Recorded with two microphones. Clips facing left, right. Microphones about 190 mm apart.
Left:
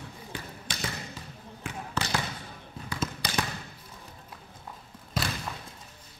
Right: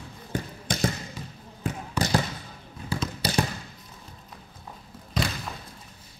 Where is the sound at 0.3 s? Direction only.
45° right (ahead or behind).